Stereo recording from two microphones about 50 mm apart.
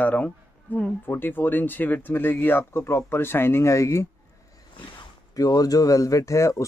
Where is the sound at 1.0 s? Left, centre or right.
Left.